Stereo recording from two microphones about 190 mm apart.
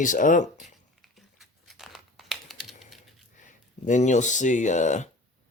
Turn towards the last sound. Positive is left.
turn(degrees=40)  # may be behind; listen again after turning